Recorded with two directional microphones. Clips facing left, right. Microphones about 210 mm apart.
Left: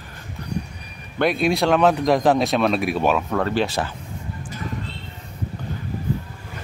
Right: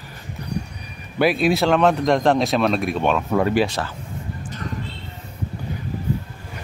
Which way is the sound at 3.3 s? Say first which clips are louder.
Right 3 dB; 10° right (ahead or behind).